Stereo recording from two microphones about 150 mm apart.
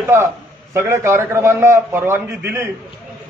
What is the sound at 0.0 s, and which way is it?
A man's voice, 15° right (ahead or behind).